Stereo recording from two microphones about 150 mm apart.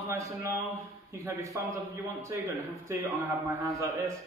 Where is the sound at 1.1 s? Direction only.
20° right (ahead or behind).